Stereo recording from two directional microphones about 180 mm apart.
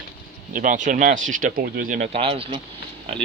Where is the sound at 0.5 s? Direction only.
45° right (ahead or behind).